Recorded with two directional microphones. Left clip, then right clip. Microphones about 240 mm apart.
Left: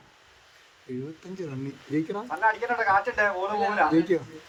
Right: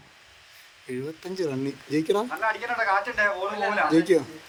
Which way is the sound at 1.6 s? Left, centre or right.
Right.